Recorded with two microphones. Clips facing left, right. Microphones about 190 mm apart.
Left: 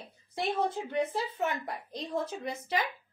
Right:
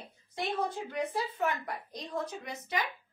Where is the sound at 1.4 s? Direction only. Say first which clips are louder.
Even; 30° left (ahead or behind).